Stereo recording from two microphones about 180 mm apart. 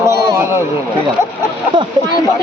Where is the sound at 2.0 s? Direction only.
25° right (ahead or behind).